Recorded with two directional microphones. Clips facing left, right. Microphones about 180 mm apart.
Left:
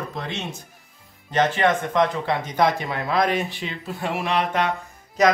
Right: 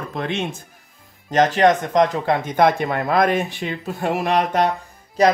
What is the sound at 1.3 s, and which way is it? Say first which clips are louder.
Speech: right 5 dB; 40° right (ahead or behind).